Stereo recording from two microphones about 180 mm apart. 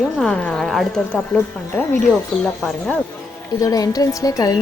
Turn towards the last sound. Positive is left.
turn(degrees=20)  # may be behind; listen again after turning